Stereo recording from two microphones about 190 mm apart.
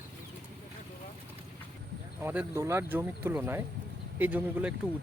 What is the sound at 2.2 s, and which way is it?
Speech, 10° right (ahead or behind).